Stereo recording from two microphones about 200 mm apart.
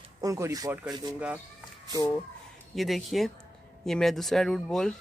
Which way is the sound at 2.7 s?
Centre (ahead or behind).